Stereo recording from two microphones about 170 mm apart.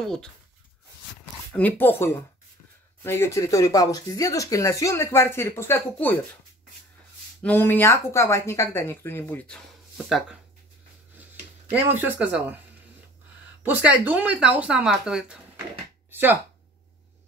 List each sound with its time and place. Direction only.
0.0 s speech: 5° left (ahead or behind)
1.5 s speech: 10° left (ahead or behind)
7.4 s speech: 10° left (ahead or behind)
11.7 s speech: 10° right (ahead or behind)
13.6 s speech: 10° right (ahead or behind)
16.1 s a sound: 10° right (ahead or behind)